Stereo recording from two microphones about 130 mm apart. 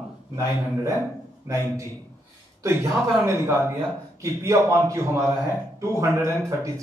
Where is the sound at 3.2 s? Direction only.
20° right (ahead or behind).